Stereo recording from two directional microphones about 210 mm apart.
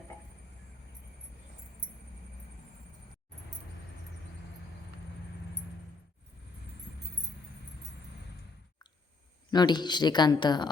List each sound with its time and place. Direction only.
9.5 s speech: 20° left (ahead or behind)